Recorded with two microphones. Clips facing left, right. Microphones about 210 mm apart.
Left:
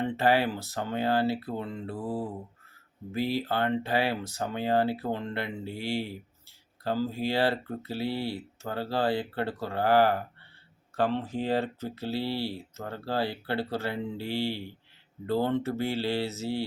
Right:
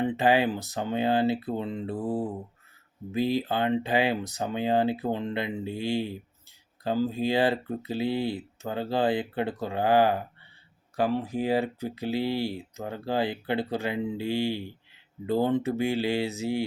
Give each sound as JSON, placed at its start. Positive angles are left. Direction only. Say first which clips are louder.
{"t": 0.0, "sound": "speech", "louder": "right 2 dB", "side_deg": -15}